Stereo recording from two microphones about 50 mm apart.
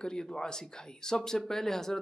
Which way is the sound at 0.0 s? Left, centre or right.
Centre.